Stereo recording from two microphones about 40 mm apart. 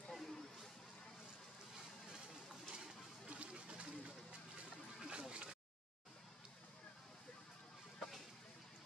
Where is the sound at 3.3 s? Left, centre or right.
Right.